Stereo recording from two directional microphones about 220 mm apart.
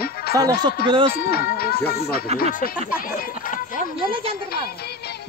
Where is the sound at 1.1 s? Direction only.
45° left (ahead or behind).